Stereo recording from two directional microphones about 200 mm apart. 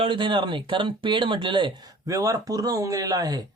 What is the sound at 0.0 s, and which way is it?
Speech, 25° right (ahead or behind).